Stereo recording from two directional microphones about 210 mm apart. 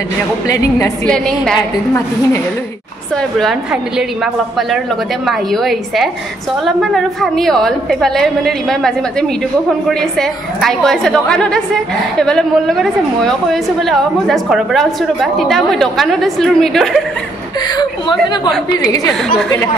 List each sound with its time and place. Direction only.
0.5 s a woman's voice: 15° left (ahead or behind)
1.0 s a woman's voice: 5° left (ahead or behind)
5.2 s a woman's voice: centre (ahead or behind)
18.7 s a woman's voice: 20° left (ahead or behind)